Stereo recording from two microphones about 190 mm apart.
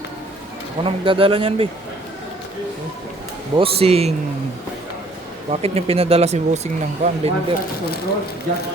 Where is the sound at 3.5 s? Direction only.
30° right (ahead or behind).